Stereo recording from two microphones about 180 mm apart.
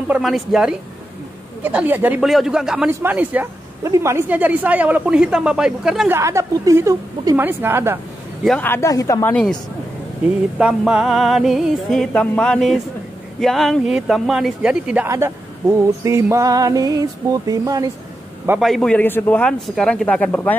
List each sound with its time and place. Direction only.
0.1 s music: centre (ahead or behind)
2.9 s a woman's voice: 10° right (ahead or behind)
6.1 s a woman's voice: 15° right (ahead or behind)
8.5 s speech: 10° left (ahead or behind)
10.6 s music: 5° right (ahead or behind)
16.0 s speech: 15° right (ahead or behind)
18.6 s music: centre (ahead or behind)